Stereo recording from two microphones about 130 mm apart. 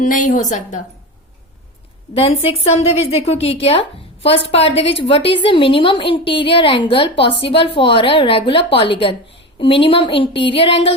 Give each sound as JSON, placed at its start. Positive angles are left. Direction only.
{"t": 0.0, "sound": "a woman's voice", "side_deg": 80}
{"t": 2.1, "sound": "a woman's voice", "side_deg": 50}